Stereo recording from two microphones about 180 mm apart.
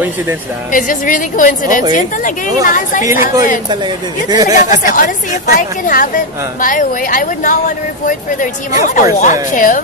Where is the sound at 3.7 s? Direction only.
25° right (ahead or behind).